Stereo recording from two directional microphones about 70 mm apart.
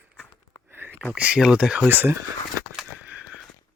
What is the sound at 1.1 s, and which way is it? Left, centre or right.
Speech, right.